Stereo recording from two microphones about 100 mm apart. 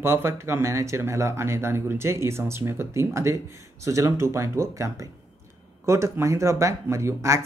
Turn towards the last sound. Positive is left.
turn(degrees=-30)  # may be behind; listen again after turning